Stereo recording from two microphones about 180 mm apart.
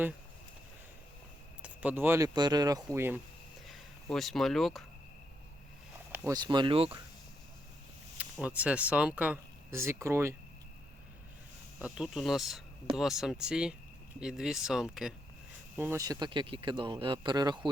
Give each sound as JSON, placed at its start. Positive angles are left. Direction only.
{"t": 1.6, "sound": "speech", "side_deg": -10}
{"t": 3.7, "sound": "speech", "side_deg": 0}
{"t": 6.1, "sound": "a sound", "side_deg": -10}
{"t": 6.3, "sound": "speech", "side_deg": -25}
{"t": 8.2, "sound": "speech", "side_deg": -10}
{"t": 11.9, "sound": "speech", "side_deg": 0}